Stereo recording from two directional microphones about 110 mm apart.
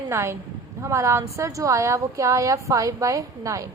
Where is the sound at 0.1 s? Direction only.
25° right (ahead or behind).